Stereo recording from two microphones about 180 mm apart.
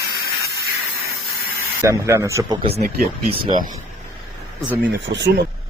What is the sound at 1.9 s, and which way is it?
Speech, 15° right (ahead or behind).